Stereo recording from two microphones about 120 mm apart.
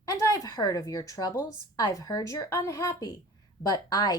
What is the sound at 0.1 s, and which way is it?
A woman's voice, 25° left (ahead or behind).